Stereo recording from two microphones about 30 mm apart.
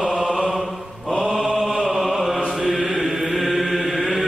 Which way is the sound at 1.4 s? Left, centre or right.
Centre.